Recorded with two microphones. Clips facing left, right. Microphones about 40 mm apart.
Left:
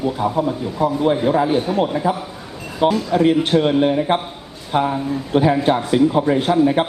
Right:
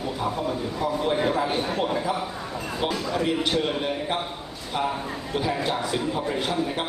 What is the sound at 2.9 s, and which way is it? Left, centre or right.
A man's voice, left.